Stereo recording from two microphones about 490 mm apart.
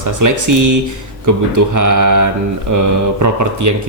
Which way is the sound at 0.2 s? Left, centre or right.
Right.